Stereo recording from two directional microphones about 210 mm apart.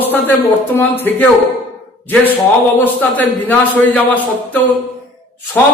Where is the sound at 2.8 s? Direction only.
10° left (ahead or behind).